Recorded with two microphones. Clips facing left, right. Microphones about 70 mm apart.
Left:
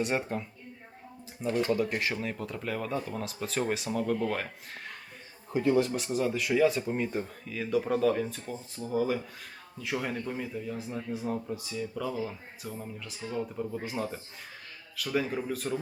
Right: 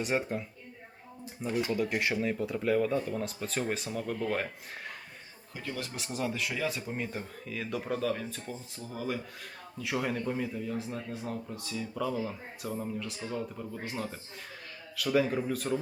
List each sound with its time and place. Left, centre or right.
0.0 s speech: centre
5.5 s speech: left
5.8 s speech: centre